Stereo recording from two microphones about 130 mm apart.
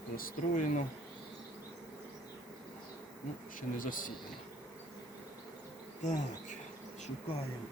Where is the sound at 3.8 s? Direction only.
90° left.